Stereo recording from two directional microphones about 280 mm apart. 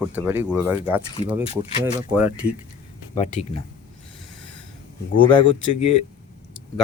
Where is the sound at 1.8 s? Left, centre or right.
Centre.